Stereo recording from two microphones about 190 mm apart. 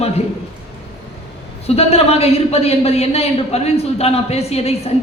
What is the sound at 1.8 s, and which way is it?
Speech, 30° left (ahead or behind).